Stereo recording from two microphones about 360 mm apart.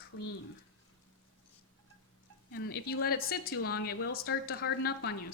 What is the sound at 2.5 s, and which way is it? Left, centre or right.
A woman's voice, left.